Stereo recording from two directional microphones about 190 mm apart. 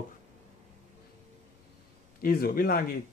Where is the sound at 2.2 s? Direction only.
50° left (ahead or behind).